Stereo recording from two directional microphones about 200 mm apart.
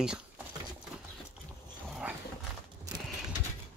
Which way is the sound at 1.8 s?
5° right (ahead or behind).